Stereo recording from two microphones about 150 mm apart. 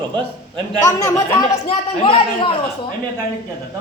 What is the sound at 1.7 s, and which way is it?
Speech, 35° left (ahead or behind).